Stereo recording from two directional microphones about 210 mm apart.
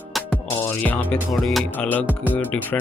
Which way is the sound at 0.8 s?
5° left (ahead or behind).